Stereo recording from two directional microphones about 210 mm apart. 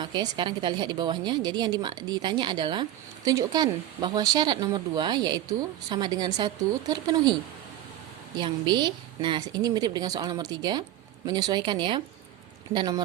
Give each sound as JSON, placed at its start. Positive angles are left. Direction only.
{"t": 0.0, "sound": "speech", "side_deg": -20}
{"t": 8.4, "sound": "speech", "side_deg": -20}